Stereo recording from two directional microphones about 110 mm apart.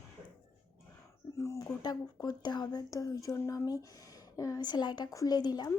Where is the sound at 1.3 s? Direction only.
25° left (ahead or behind).